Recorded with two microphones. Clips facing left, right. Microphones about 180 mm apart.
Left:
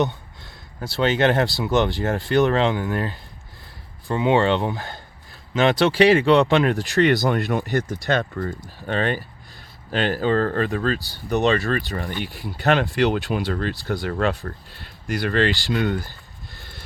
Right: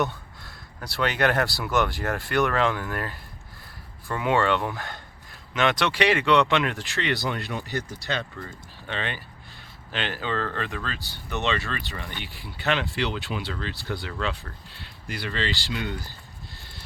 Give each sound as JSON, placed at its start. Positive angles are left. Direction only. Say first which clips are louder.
{"t": 0.0, "sound": "a sound", "louder": "left 4 dB", "side_deg": 20}
{"t": 0.9, "sound": "speech", "louder": "left 5 dB", "side_deg": 25}
{"t": 7.3, "sound": "speech", "louder": "left 9 dB", "side_deg": 50}